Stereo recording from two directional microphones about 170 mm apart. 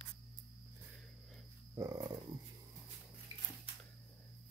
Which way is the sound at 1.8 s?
20° right (ahead or behind).